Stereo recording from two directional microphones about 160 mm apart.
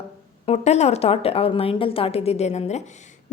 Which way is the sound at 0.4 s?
45° left (ahead or behind).